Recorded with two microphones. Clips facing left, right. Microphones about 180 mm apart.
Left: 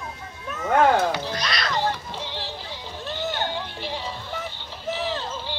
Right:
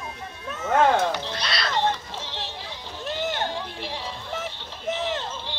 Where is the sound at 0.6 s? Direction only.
10° left (ahead or behind).